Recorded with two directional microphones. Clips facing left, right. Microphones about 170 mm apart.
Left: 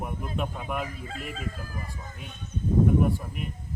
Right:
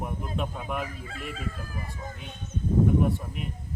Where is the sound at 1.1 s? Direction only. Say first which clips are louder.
Left 1 dB; 40° left (ahead or behind).